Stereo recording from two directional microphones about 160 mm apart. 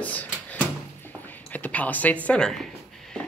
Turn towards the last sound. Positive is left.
turn(degrees=0)  # may be behind; listen again after turning